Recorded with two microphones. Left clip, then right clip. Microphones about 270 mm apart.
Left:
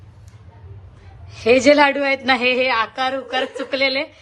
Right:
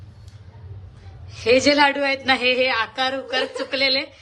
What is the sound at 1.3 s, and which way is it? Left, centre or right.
A woman's voice, centre.